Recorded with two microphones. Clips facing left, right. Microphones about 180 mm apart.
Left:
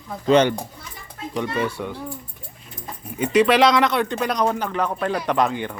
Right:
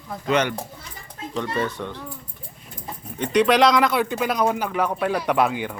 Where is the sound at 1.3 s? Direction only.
10° left (ahead or behind).